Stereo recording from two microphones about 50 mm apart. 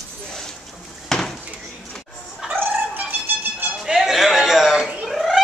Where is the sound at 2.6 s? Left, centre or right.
Right.